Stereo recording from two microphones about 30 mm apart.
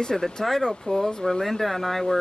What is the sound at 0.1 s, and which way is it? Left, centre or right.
Speech, centre.